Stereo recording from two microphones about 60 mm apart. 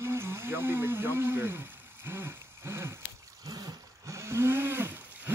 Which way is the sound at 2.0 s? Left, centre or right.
Right.